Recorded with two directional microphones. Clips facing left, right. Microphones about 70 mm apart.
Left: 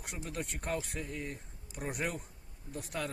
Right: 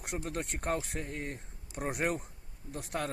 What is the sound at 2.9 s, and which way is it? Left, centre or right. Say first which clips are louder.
Speech: right 3 dB; right.